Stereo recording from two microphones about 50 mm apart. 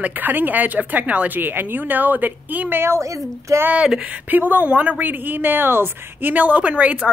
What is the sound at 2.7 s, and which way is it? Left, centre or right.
Speech, right.